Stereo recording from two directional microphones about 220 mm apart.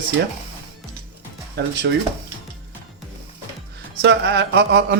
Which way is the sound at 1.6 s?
55° right (ahead or behind).